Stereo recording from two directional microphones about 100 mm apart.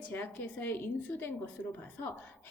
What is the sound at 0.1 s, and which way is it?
Speech, 20° left (ahead or behind).